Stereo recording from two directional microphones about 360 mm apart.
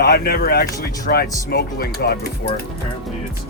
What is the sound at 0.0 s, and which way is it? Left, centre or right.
Speech, left.